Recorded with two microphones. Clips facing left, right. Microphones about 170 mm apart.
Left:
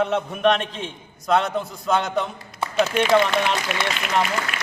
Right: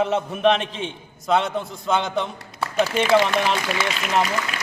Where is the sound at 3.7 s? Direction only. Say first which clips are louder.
Right 1 dB; 35° right (ahead or behind).